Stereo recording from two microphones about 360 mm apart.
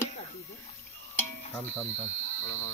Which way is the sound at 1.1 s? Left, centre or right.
Centre.